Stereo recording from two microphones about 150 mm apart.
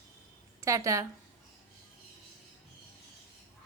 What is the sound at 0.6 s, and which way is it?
Speech, 20° right (ahead or behind).